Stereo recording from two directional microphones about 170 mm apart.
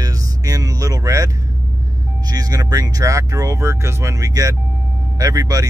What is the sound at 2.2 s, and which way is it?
Speech, 20° right (ahead or behind).